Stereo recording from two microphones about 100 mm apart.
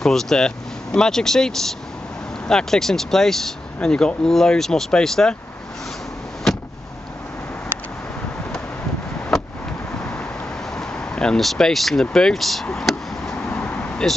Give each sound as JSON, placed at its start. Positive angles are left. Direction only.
{"t": 0.0, "sound": "speech", "side_deg": 5}
{"t": 10.8, "sound": "speech", "side_deg": 10}
{"t": 12.7, "sound": "chop", "side_deg": 5}
{"t": 13.5, "sound": "vehicle", "side_deg": 20}